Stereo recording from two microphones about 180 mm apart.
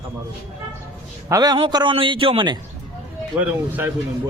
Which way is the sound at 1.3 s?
20° right (ahead or behind).